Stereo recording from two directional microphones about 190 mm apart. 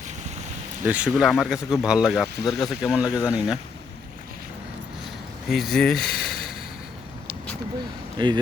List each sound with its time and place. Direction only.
0.9 s speech: 5° right (ahead or behind)
5.5 s speech: centre (ahead or behind)
8.2 s speech: 25° right (ahead or behind)